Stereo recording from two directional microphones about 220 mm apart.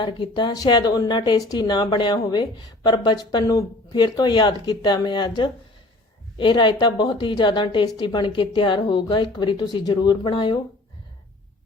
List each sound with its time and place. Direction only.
0.0 s a woman's voice: 20° left (ahead or behind)